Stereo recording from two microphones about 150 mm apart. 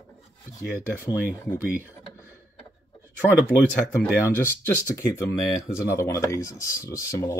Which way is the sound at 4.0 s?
15° left (ahead or behind).